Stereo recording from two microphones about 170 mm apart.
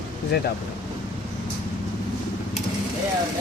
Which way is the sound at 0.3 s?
75° left (ahead or behind).